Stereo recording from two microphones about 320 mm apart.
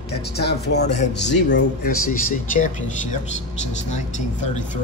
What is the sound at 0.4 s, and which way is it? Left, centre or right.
A man's voice, left.